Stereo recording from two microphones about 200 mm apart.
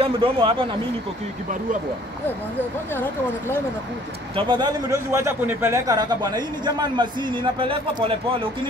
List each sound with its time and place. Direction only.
0.0 s a man's voice: 25° right (ahead or behind)
2.9 s speech: 10° left (ahead or behind)
4.4 s a man's voice: 20° right (ahead or behind)